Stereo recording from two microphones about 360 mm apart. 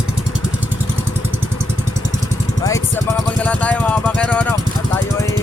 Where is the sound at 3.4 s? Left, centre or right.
Centre.